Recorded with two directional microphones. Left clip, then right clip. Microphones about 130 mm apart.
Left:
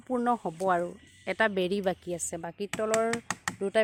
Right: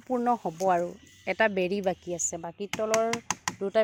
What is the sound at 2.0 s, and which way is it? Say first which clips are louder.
Speech: right 2 dB; 20° left (ahead or behind).